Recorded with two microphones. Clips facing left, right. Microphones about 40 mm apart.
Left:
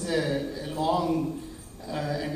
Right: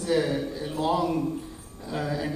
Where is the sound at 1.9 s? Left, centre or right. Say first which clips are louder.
Right 1 dB; centre.